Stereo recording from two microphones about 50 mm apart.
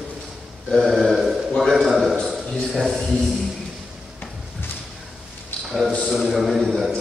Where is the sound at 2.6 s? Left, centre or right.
Centre.